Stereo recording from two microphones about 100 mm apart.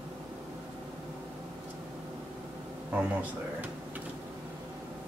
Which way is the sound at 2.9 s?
15° right (ahead or behind).